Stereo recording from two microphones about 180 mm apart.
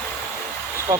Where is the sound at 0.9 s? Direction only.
15° right (ahead or behind).